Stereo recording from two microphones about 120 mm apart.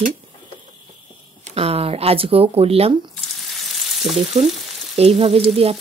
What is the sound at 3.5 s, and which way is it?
Frying, centre (ahead or behind).